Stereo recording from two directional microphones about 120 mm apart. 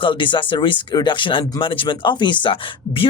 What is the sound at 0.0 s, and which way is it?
Speech, 45° left (ahead or behind).